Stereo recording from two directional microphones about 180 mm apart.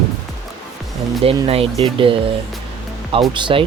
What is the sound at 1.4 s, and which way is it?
Speech, 35° right (ahead or behind).